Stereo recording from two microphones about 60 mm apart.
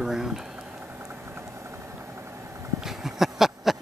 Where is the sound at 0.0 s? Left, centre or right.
Centre.